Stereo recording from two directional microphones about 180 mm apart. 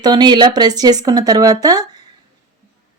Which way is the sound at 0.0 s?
20° right (ahead or behind).